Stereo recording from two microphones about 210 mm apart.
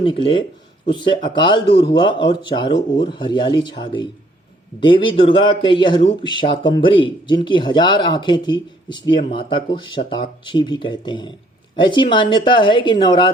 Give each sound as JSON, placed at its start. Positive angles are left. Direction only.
{"t": 0.0, "sound": "a man's voice", "side_deg": 25}